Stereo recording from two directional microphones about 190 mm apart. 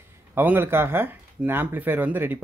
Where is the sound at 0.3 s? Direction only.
10° right (ahead or behind).